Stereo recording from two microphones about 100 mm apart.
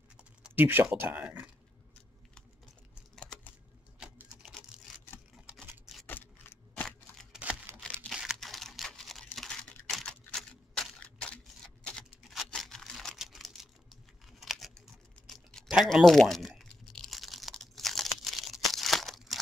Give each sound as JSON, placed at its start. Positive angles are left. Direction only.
{"t": 0.6, "sound": "speech", "side_deg": -20}
{"t": 3.2, "sound": "typing", "side_deg": 10}
{"t": 6.0, "sound": "keys jangling", "side_deg": 20}
{"t": 6.7, "sound": "a sound", "side_deg": 5}
{"t": 7.8, "sound": "crumpling", "side_deg": 10}
{"t": 8.1, "sound": "crumpling", "side_deg": -5}
{"t": 11.8, "sound": "a sound", "side_deg": 10}
{"t": 15.2, "sound": "typing", "side_deg": 0}